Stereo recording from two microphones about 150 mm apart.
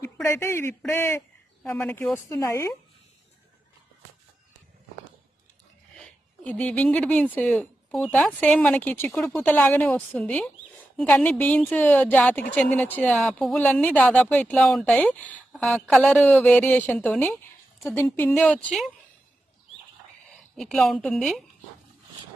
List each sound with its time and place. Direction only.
0.0 s speech: 20° left (ahead or behind)
1.8 s speech: 5° left (ahead or behind)
6.0 s speech: 10° left (ahead or behind)
18.3 s a woman's voice: 5° left (ahead or behind)
20.6 s a woman's voice: centre (ahead or behind)